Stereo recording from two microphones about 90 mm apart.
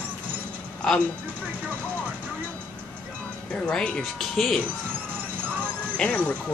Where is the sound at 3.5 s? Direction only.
10° left (ahead or behind).